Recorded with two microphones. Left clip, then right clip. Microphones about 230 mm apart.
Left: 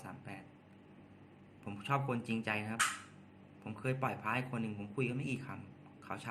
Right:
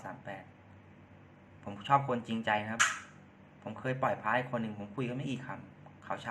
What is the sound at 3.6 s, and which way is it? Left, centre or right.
A man's voice, left.